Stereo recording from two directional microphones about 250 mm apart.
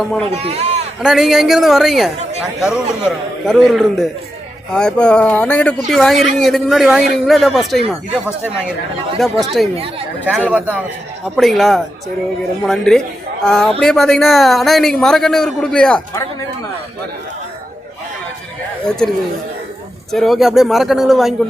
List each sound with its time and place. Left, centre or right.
0.3 s speech: right
1.0 s speech: centre
18.9 s speech: centre